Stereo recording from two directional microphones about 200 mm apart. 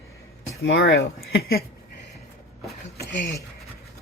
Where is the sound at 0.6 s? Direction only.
65° left (ahead or behind).